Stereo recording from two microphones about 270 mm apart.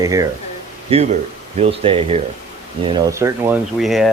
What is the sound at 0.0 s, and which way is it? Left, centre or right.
Speech, centre.